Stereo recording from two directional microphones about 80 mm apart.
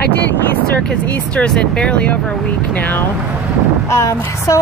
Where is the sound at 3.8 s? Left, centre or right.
Left.